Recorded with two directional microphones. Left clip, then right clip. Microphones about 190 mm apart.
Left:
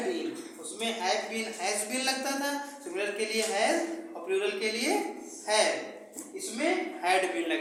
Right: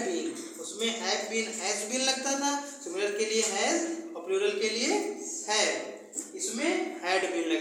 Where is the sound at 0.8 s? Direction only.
15° left (ahead or behind).